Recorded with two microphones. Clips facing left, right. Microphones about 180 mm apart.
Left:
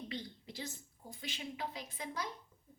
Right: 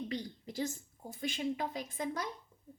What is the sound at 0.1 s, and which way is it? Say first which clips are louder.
A woman's voice: right 5 dB; 45° right (ahead or behind).